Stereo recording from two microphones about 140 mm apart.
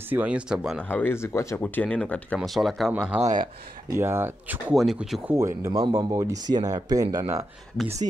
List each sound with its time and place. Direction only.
0.1 s speech: 10° right (ahead or behind)
0.7 s speech: 10° left (ahead or behind)
1.8 s speech: 10° left (ahead or behind)
2.9 s speech: 10° right (ahead or behind)
4.7 s speech: centre (ahead or behind)
5.3 s speech: 20° right (ahead or behind)